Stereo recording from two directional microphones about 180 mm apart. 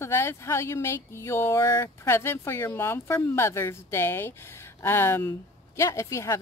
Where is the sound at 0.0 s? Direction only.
15° left (ahead or behind).